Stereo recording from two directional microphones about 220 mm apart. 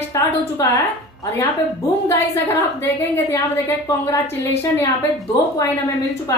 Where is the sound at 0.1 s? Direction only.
15° left (ahead or behind).